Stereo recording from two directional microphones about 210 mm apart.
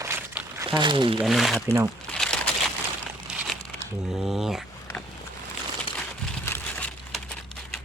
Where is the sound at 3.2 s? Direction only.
Centre (ahead or behind).